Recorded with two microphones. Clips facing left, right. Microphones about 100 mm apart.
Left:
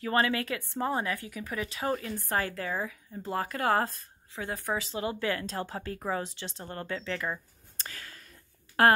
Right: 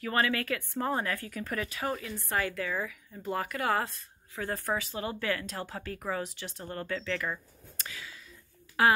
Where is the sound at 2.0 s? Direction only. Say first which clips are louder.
Left 1 dB; 35° left (ahead or behind).